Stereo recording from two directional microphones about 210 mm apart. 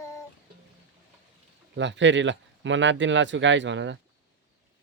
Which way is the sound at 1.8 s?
60° right (ahead or behind).